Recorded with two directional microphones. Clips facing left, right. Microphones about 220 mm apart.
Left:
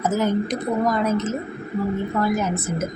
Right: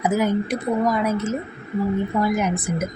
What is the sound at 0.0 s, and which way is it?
A woman's voice, 10° right (ahead or behind).